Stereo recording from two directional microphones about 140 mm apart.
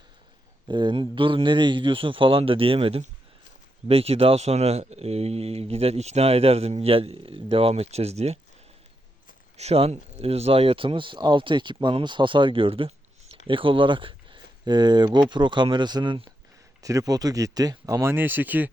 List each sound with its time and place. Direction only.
0.7 s speech: 35° right (ahead or behind)
9.6 s speech: 45° right (ahead or behind)
16.8 s speech: 25° right (ahead or behind)